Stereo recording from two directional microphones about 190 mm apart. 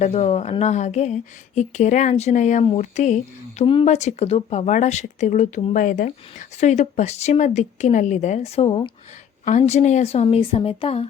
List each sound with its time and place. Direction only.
0.0 s speech: 35° left (ahead or behind)